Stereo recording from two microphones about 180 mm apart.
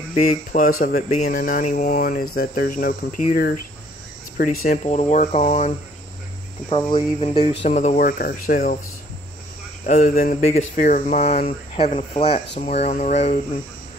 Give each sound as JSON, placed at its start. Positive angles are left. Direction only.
{"t": 0.1, "sound": "speech", "side_deg": 40}
{"t": 4.8, "sound": "speech", "side_deg": 40}
{"t": 6.9, "sound": "speech", "side_deg": 30}
{"t": 9.8, "sound": "speech", "side_deg": 50}